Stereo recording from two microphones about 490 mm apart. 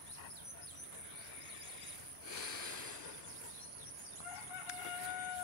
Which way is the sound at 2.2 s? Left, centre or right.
Right.